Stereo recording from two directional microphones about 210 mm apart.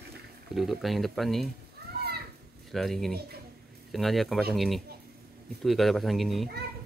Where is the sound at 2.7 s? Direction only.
Centre (ahead or behind).